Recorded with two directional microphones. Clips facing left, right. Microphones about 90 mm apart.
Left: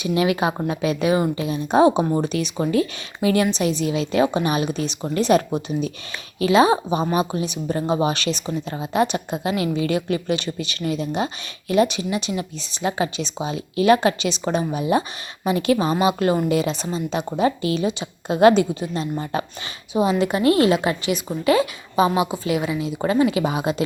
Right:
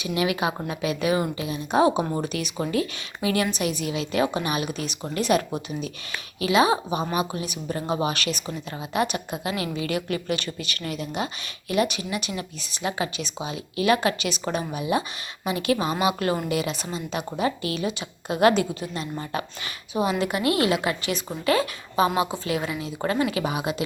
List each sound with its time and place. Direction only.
0.0 s a woman's voice: 30° left (ahead or behind)
6.4 s a woman's voice: 35° left (ahead or behind)
14.7 s a woman's voice: 35° left (ahead or behind)